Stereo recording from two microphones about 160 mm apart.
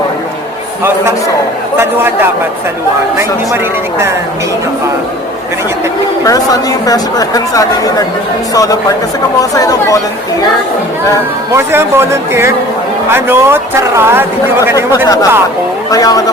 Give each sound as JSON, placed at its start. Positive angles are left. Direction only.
{"t": 1.8, "sound": "speech", "side_deg": -15}
{"t": 3.2, "sound": "speech", "side_deg": -15}
{"t": 6.2, "sound": "a woman's voice", "side_deg": 20}
{"t": 11.5, "sound": "speech", "side_deg": -15}
{"t": 15.0, "sound": "a woman's voice", "side_deg": 25}